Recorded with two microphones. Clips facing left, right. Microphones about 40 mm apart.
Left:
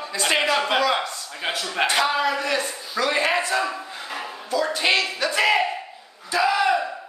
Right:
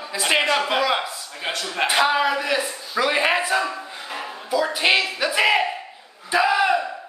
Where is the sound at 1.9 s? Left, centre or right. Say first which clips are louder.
Right 4 dB; centre.